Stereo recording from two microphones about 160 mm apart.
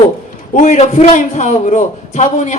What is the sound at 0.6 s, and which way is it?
A man's voice, 50° left (ahead or behind).